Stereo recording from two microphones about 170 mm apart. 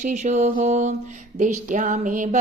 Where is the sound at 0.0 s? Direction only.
45° right (ahead or behind).